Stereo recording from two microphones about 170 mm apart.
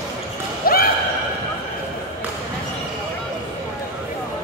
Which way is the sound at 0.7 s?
60° left (ahead or behind).